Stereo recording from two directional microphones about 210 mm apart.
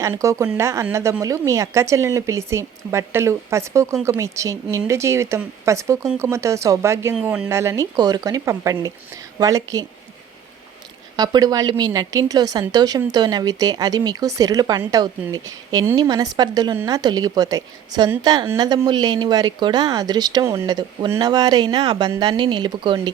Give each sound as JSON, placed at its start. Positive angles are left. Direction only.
{"t": 0.0, "sound": "speech", "side_deg": -15}
{"t": 11.2, "sound": "a woman's voice", "side_deg": -20}